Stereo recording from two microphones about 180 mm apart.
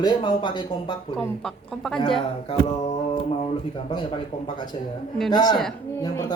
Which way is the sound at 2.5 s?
35° left (ahead or behind).